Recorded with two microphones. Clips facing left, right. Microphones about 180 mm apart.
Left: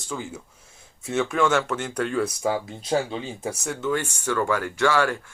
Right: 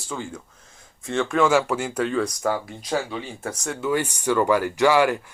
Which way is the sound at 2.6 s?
25° left (ahead or behind).